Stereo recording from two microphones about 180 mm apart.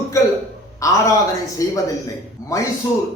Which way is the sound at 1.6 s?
20° left (ahead or behind).